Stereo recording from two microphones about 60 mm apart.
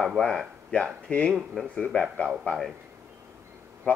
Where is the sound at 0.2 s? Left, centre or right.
Centre.